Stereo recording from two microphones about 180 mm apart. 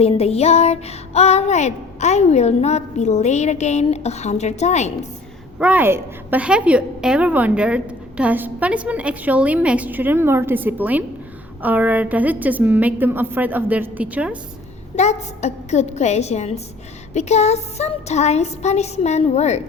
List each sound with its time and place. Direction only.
0.0 s child singing: 35° left (ahead or behind)
5.5 s a woman's voice: 5° right (ahead or behind)
14.9 s child singing: 40° left (ahead or behind)